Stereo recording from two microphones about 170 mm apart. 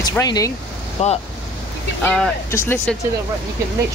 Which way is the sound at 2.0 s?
5° left (ahead or behind).